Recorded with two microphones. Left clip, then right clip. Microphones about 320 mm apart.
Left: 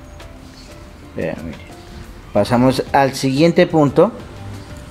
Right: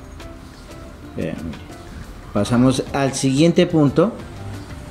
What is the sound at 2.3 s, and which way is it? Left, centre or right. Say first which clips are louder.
Speech: left 4 dB; centre.